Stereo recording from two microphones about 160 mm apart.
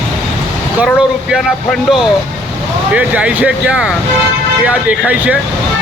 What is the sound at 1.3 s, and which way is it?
Speech, centre (ahead or behind).